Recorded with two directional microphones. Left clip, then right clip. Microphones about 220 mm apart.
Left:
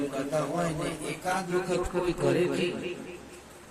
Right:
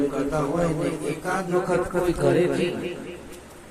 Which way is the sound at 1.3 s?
Centre (ahead or behind).